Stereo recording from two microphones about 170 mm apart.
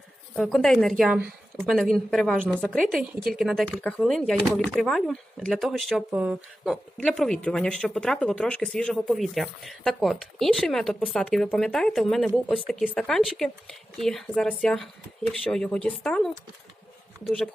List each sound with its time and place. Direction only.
0.3 s speech: centre (ahead or behind)
6.9 s speech: centre (ahead or behind)